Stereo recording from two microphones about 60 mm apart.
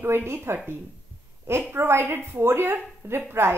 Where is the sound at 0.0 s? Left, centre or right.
Right.